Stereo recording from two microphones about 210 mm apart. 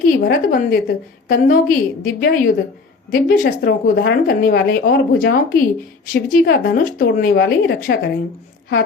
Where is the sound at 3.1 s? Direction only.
40° left (ahead or behind).